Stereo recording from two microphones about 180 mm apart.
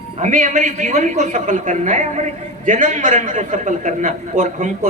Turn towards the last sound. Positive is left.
turn(degrees=-40)  # may be behind; listen again after turning